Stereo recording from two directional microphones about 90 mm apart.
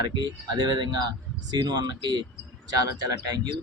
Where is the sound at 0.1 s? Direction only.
50° right (ahead or behind).